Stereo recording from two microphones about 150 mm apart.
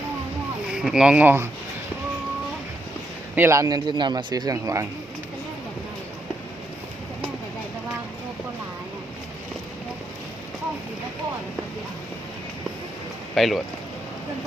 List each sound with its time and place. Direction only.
0.7 s speech: 5° right (ahead or behind)
3.3 s a man's voice: 15° right (ahead or behind)
13.3 s speech: centre (ahead or behind)